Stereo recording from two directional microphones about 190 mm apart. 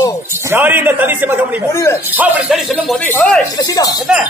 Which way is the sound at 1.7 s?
15° left (ahead or behind).